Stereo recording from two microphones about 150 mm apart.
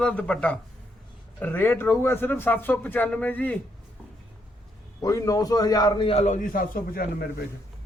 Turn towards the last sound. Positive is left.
turn(degrees=85)